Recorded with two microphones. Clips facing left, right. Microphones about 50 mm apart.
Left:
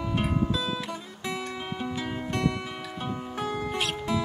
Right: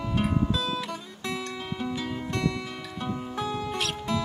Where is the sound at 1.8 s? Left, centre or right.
Centre.